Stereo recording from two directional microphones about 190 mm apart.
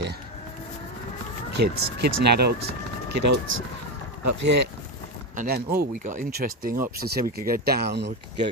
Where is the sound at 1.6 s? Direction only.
60° right (ahead or behind).